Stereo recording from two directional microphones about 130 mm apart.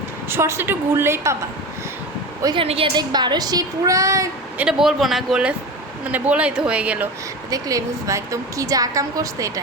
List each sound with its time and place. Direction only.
0.3 s a woman's voice: 20° right (ahead or behind)
2.6 s a woman's voice: 45° right (ahead or behind)
2.9 s a woman's voice: 30° right (ahead or behind)
4.5 s speech: 5° right (ahead or behind)
7.5 s a woman's voice: 25° right (ahead or behind)